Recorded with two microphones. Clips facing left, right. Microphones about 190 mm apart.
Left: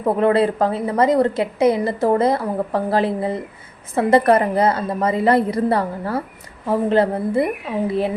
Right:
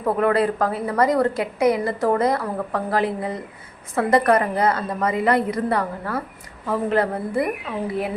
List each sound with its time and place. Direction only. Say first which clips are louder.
0.0 s a woman's voice: left 3 dB; 25° left (ahead or behind)